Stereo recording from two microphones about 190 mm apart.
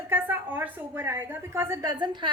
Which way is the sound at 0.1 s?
10° right (ahead or behind).